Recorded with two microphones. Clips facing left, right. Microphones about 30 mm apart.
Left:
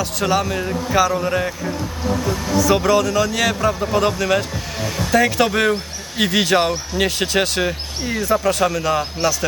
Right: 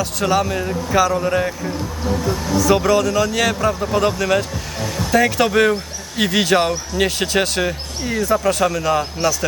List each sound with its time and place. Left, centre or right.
0.0 s speech: centre